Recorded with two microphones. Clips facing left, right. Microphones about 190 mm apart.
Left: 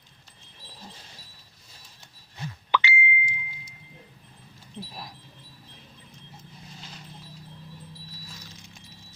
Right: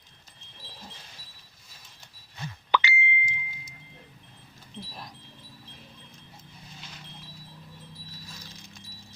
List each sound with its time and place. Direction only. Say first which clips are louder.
2.7 s plop: even; 45° right (ahead or behind)